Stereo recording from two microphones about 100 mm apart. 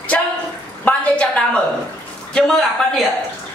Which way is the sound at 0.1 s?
15° left (ahead or behind).